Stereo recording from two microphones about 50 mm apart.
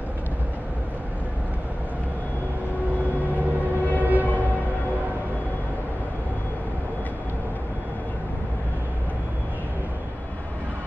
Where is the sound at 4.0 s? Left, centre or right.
Right.